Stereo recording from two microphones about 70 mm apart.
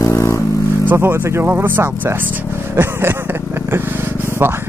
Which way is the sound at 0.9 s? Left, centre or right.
Right.